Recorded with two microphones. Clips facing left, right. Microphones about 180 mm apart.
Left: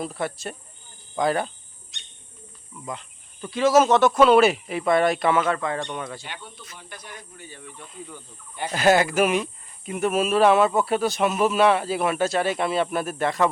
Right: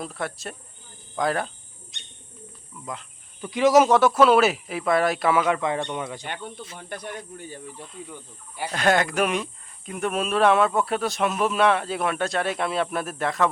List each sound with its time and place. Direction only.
0.0 s speech: centre (ahead or behind)
1.1 s cricket: centre (ahead or behind)
2.8 s speech: centre (ahead or behind)
3.4 s speech: 15° right (ahead or behind)
5.5 s speech: 20° right (ahead or behind)
6.2 s speech: 50° right (ahead or behind)
7.6 s speech: 35° right (ahead or behind)
8.5 s speech: 5° right (ahead or behind)